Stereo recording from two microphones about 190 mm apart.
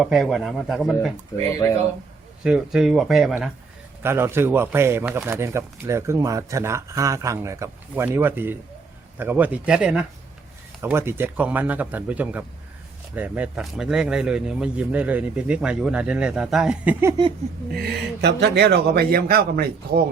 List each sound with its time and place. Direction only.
0.0 s speech: centre (ahead or behind)
1.6 s a man's voice: 15° left (ahead or behind)
2.4 s speech: 5° right (ahead or behind)
17.7 s speech: 55° right (ahead or behind)